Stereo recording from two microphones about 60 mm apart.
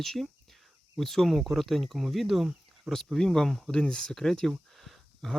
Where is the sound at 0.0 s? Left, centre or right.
Centre.